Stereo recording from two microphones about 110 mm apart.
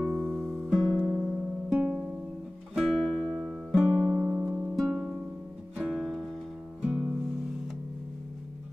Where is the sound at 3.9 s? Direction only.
20° right (ahead or behind).